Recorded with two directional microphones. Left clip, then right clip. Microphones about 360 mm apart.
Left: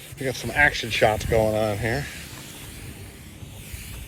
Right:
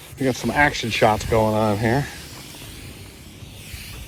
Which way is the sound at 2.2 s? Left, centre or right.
Centre.